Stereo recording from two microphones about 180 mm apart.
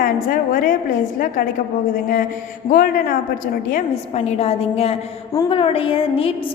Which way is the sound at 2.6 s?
50° left (ahead or behind).